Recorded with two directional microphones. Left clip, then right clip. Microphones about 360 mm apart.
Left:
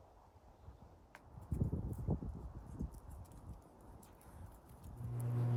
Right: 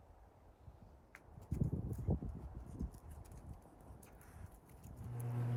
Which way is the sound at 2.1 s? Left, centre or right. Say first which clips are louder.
Even; centre.